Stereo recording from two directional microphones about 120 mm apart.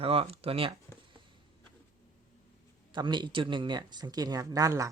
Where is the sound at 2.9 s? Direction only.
40° right (ahead or behind).